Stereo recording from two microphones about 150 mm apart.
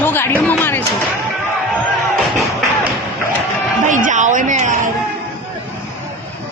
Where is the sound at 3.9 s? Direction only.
60° right (ahead or behind).